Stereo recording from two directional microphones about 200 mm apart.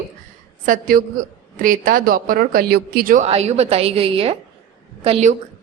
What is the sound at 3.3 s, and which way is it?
A woman's voice, 30° right (ahead or behind).